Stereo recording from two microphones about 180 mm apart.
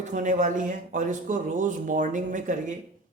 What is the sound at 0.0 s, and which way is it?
Speech, 45° right (ahead or behind).